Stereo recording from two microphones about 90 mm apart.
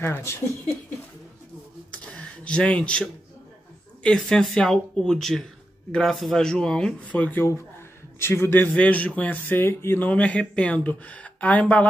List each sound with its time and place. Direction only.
0.0 s a man's voice: 30° left (ahead or behind)
1.9 s a sound: 10° left (ahead or behind)
4.0 s a man's voice: 5° left (ahead or behind); by 8.6 s 25° left (ahead or behind)
8.7 s speech: 15° left (ahead or behind)